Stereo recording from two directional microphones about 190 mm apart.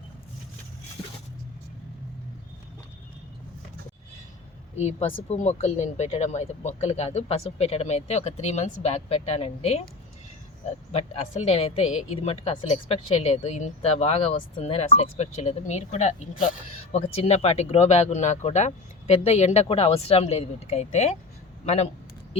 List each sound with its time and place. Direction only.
4.8 s speech: 35° left (ahead or behind)
10.9 s speech: 30° left (ahead or behind)